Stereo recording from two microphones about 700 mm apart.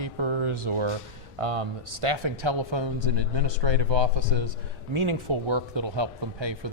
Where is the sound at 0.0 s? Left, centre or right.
Right.